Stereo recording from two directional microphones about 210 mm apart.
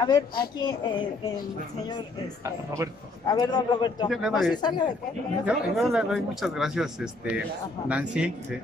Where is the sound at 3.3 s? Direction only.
20° left (ahead or behind).